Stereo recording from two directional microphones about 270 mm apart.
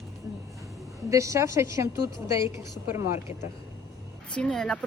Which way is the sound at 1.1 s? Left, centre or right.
Centre.